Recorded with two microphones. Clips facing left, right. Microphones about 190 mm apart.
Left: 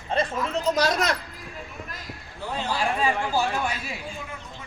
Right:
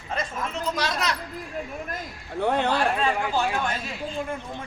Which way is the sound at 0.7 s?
45° left (ahead or behind).